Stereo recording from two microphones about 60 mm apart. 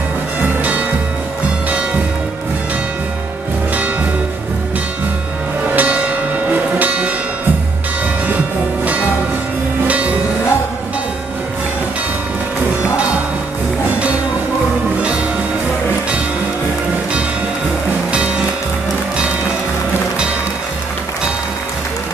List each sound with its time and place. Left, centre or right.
5.8 s music: right
6.8 s church bell: right
9.8 s music: right